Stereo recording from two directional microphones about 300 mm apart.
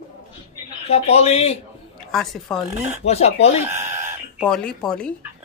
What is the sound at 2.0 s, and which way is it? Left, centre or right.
Speech, centre.